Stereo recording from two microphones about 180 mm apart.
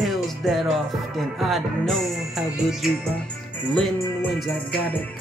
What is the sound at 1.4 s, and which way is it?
Speech, centre (ahead or behind).